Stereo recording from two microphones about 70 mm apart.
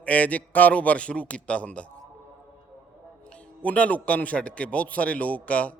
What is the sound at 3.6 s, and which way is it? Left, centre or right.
A man's voice, left.